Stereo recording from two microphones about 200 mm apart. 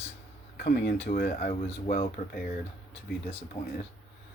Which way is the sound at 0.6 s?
50° left (ahead or behind).